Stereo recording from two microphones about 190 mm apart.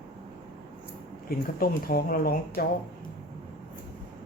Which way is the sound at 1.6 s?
50° left (ahead or behind).